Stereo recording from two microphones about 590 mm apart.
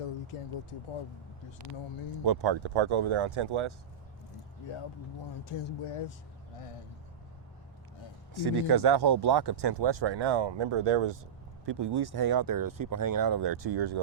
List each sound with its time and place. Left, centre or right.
0.0 s speech: left
2.2 s speech: right
5.5 s speech: left
8.3 s speech: right